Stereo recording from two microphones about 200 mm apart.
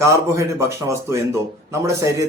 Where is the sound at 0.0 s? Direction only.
15° right (ahead or behind).